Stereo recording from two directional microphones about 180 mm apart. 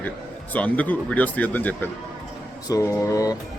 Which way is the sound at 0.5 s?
10° left (ahead or behind).